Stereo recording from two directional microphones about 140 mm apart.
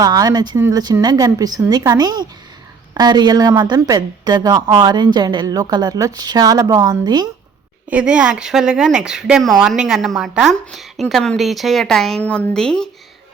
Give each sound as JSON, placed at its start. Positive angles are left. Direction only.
{"t": 0.0, "sound": "speech", "side_deg": -25}
{"t": 7.9, "sound": "speech", "side_deg": -10}